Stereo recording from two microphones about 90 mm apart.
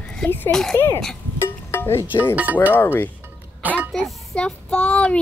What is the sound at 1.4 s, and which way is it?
Music, 25° left (ahead or behind).